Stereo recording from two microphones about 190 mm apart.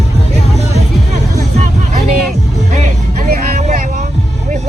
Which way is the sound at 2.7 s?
40° right (ahead or behind).